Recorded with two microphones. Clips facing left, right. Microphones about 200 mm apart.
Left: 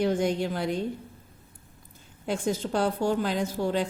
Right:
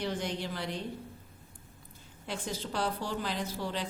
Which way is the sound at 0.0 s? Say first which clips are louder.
Left 9 dB; 50° left (ahead or behind).